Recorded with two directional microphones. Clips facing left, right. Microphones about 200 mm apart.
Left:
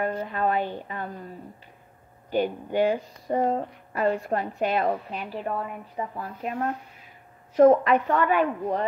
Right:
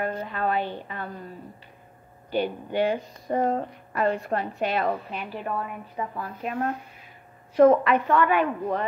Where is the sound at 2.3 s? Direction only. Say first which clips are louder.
Left 1 dB; 40° left (ahead or behind).